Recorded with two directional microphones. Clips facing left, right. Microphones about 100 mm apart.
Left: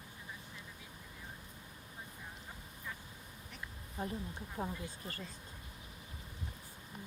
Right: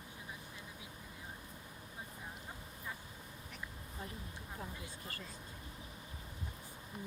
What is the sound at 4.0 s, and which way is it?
Speech, 40° left (ahead or behind).